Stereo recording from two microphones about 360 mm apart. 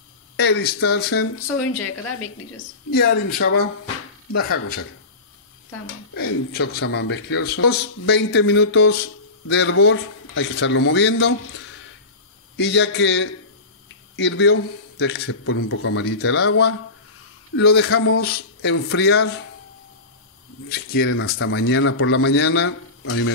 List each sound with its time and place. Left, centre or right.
0.4 s speech: left
3.8 s a sound: left
5.7 s speech: left
12.5 s speech: left
20.6 s speech: left